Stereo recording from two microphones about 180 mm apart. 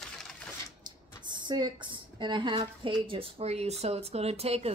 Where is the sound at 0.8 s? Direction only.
25° right (ahead or behind).